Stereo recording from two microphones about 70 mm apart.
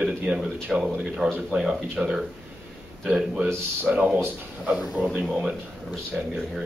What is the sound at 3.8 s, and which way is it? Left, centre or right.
Speech, right.